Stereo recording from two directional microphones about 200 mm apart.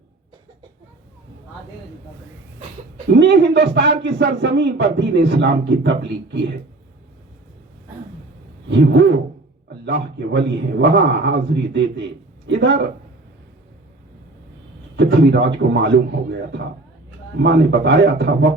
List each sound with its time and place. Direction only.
3.2 s a man's voice: 60° right (ahead or behind)
8.7 s a man's voice: 60° right (ahead or behind)
14.9 s a man's voice: 60° right (ahead or behind)
17.4 s a man's voice: 60° right (ahead or behind)